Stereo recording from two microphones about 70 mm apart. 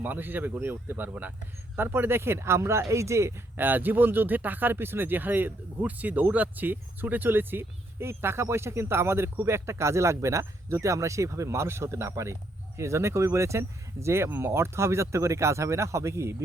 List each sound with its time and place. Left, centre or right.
0.0 s speech: right
3.6 s speech: right